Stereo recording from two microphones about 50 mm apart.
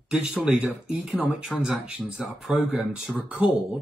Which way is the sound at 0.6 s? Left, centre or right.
Centre.